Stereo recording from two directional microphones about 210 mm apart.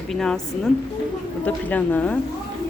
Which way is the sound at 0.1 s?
Centre (ahead or behind).